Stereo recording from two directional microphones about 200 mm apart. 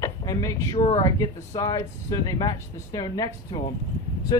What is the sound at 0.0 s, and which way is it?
Speech, 15° left (ahead or behind).